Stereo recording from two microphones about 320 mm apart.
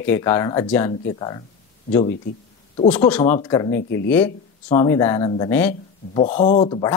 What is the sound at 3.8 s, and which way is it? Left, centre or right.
Speech, left.